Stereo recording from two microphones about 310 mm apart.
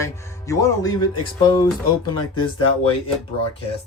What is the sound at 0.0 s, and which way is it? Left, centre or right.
A man's voice, centre.